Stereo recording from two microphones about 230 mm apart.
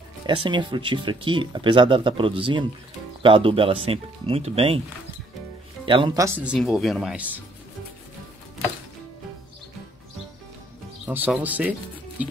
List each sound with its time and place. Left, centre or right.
0.3 s speech: centre
5.9 s speech: right
6.4 s speech: centre
11.1 s speech: centre